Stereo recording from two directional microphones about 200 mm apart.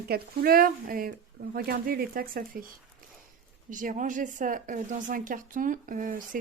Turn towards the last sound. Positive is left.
turn(degrees=-45)  # may be behind; listen again after turning